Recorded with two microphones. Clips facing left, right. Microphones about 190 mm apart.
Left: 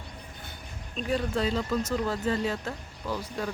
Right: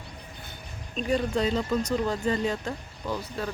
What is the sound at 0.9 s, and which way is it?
Speech, centre (ahead or behind).